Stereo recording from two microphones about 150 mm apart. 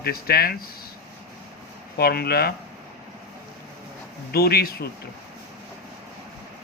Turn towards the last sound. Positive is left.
turn(degrees=85)